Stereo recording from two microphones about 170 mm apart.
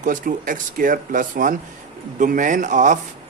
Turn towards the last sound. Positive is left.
turn(degrees=-50)  # may be behind; listen again after turning